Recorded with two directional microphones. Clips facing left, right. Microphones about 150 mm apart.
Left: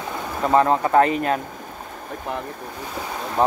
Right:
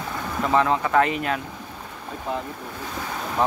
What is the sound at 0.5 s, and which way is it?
Speech, 40° left (ahead or behind).